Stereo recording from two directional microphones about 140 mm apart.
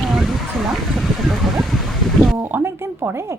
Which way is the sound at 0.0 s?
Centre (ahead or behind).